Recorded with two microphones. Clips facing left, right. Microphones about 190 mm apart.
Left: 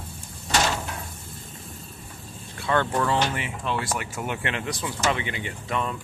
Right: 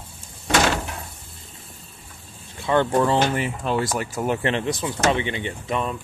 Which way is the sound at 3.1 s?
45° right (ahead or behind).